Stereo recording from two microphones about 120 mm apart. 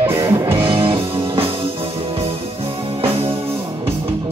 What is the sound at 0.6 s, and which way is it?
Music, 50° right (ahead or behind).